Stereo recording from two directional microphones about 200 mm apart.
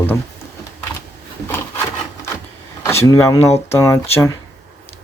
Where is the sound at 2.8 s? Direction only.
15° left (ahead or behind).